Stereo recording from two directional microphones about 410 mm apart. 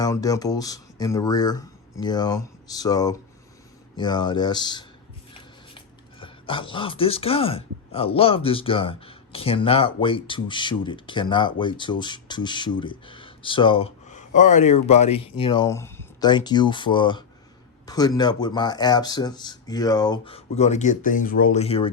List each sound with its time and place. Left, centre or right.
0.0 s speech: centre